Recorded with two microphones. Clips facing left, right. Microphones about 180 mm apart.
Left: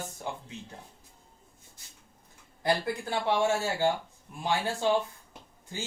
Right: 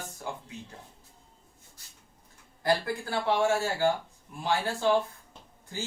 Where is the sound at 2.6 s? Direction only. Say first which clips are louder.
Right 1 dB; 20° left (ahead or behind).